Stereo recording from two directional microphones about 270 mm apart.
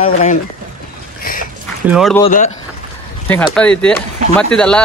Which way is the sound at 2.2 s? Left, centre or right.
Left.